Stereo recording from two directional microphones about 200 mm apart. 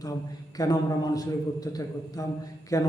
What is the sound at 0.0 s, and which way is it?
Speech, 20° left (ahead or behind).